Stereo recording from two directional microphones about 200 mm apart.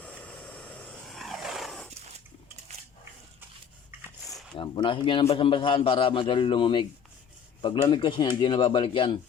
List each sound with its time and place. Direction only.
0.0 s vehicle: 5° left (ahead or behind)
4.5 s a man's voice: 25° left (ahead or behind)